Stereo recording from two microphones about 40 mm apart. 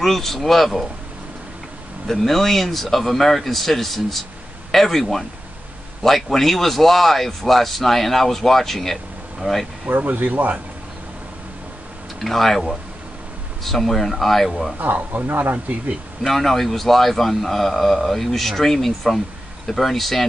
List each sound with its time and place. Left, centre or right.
0.0 s a man's voice: centre
2.0 s a man's voice: centre
9.4 s speech: right
9.8 s speech: right
12.2 s a man's voice: centre
15.2 s speech: right
16.2 s a man's voice: centre